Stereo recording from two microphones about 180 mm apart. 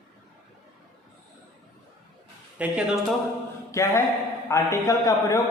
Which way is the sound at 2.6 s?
5° right (ahead or behind).